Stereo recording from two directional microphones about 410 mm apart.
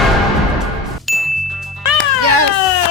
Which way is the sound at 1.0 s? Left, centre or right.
Centre.